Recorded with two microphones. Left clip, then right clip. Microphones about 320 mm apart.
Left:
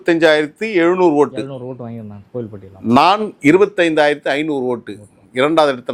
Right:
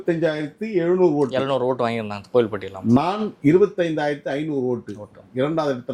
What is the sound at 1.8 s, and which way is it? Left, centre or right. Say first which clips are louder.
Speech: right 9 dB; centre.